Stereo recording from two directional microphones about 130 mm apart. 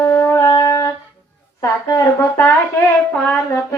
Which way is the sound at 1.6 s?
25° left (ahead or behind).